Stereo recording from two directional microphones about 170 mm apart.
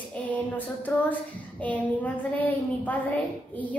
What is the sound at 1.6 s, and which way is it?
A woman's voice, 10° left (ahead or behind).